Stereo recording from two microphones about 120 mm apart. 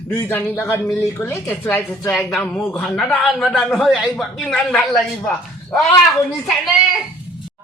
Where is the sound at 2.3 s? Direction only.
Centre (ahead or behind).